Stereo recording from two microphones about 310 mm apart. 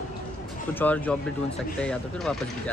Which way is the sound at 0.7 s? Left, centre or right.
Centre.